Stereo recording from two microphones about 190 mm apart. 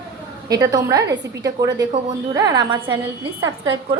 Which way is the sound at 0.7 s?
15° right (ahead or behind).